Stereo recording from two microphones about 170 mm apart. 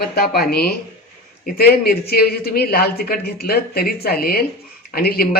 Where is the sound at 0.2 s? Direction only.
65° left (ahead or behind).